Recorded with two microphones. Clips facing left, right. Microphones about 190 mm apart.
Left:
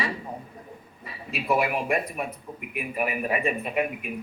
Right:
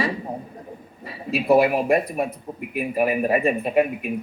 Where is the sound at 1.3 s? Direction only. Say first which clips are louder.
Right 8 dB; 35° right (ahead or behind).